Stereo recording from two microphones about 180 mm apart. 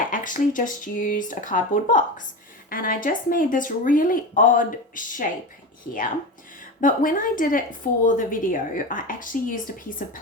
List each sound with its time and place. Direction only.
0.1 s a woman's voice: 45° left (ahead or behind)
6.8 s a woman's voice: 50° left (ahead or behind)